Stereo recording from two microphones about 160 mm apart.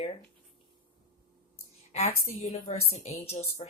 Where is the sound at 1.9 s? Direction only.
45° left (ahead or behind).